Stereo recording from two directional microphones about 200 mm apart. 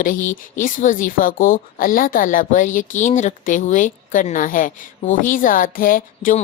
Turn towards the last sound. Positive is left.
turn(degrees=45)  # may be behind; listen again after turning